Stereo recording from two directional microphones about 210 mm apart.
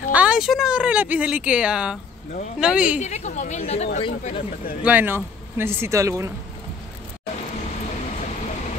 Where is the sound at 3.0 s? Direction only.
35° left (ahead or behind).